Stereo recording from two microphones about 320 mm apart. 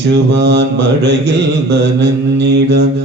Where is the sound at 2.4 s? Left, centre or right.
Right.